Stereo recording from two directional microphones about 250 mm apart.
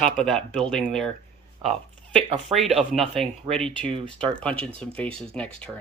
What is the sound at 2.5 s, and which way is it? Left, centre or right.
Speech, centre.